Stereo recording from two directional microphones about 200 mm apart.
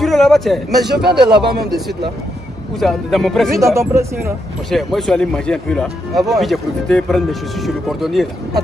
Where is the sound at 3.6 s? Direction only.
15° right (ahead or behind).